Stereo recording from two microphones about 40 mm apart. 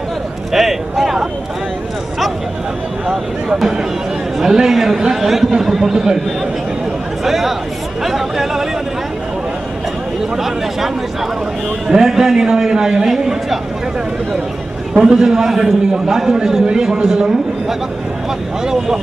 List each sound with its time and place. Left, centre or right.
0.5 s speech: centre
3.1 s a man's voice: centre
7.2 s a man's voice: centre
10.3 s a man's voice: centre
11.9 s a man's voice: centre
15.0 s a man's voice: centre